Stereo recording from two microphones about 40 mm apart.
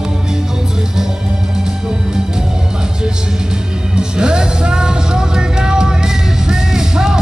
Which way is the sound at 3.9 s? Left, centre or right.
Centre.